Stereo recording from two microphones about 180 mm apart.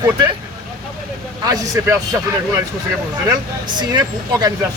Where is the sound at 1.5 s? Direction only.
20° right (ahead or behind).